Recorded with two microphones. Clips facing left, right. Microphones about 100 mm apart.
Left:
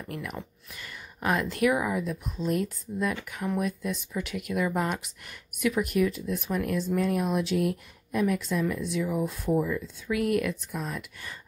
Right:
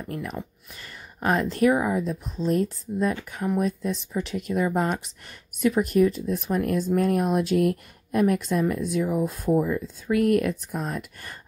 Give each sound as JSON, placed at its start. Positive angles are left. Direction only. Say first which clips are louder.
{"t": 0.1, "sound": "speech", "louder": "right 4 dB", "side_deg": -30}